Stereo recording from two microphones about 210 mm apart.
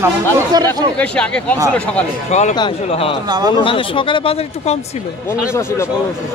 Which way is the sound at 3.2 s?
20° right (ahead or behind).